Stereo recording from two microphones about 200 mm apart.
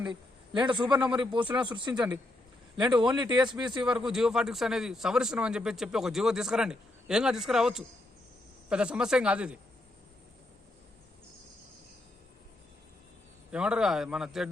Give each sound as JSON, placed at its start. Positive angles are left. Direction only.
{"t": 0.7, "sound": "speech", "side_deg": -25}
{"t": 0.9, "sound": "a man's voice", "side_deg": -5}
{"t": 1.2, "sound": "speech", "side_deg": -25}
{"t": 1.9, "sound": "speech", "side_deg": -5}
{"t": 2.7, "sound": "speech", "side_deg": -20}
{"t": 3.8, "sound": "a man's voice", "side_deg": -5}
{"t": 13.5, "sound": "a man's voice", "side_deg": -5}